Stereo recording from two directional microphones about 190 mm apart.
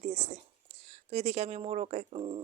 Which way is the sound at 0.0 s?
35° right (ahead or behind).